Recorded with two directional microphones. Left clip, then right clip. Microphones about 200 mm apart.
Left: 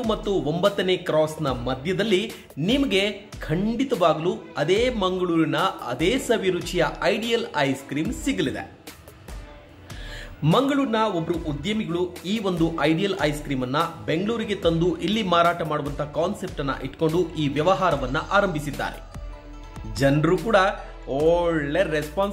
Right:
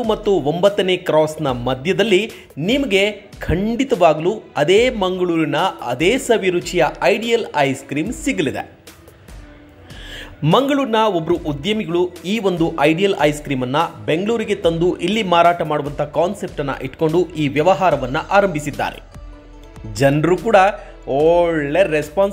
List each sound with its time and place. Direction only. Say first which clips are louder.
0.0 s a man's voice: right 7 dB; 20° right (ahead or behind)
10.1 s a man's voice: right 6 dB; 20° right (ahead or behind)
20.0 s a man's voice: right 6 dB; 20° right (ahead or behind)